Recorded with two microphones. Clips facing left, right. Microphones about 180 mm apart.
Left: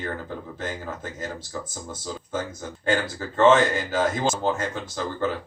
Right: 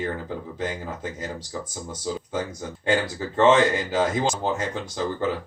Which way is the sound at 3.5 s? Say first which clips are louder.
Even; 20° right (ahead or behind).